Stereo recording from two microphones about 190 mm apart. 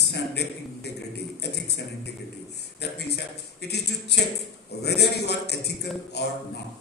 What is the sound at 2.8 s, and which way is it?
A man's voice, 60° left (ahead or behind).